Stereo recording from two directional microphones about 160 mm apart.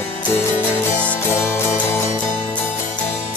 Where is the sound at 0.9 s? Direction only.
10° left (ahead or behind).